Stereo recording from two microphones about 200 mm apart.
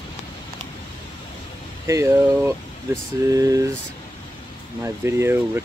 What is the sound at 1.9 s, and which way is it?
Speech, 15° right (ahead or behind).